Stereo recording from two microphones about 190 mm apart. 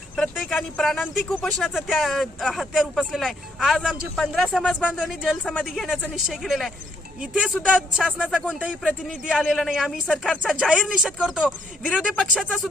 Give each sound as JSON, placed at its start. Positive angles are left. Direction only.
{"t": 0.2, "sound": "speech", "side_deg": 0}
{"t": 5.4, "sound": "speech", "side_deg": 5}